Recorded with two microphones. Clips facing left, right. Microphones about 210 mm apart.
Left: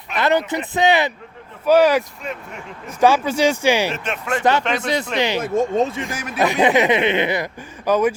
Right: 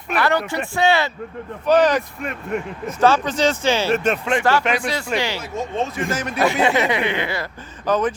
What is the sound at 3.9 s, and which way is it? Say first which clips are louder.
Speech: right 8 dB; 45° right (ahead or behind).